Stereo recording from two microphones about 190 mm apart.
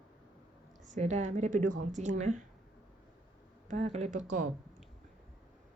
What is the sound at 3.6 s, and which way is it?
Speech, 35° right (ahead or behind).